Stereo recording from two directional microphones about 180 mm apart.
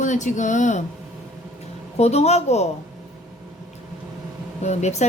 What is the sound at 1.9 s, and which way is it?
Speech, 35° left (ahead or behind).